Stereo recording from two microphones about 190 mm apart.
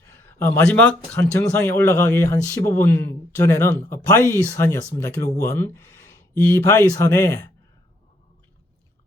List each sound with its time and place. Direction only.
0.0 s speech: 15° left (ahead or behind)